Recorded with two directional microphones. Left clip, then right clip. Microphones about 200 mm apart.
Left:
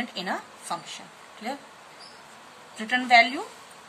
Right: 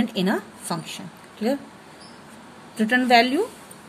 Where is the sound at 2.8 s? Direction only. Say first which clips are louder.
Right 2 dB; 30° right (ahead or behind).